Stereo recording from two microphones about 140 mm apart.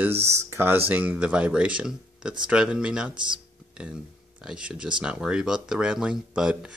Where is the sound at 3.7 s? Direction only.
5° right (ahead or behind).